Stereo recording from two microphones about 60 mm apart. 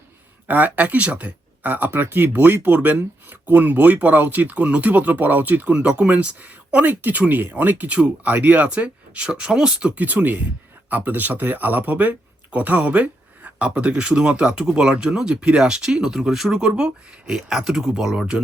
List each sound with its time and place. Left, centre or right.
0.4 s speech: right
5.7 s speech: centre
9.9 s speech: right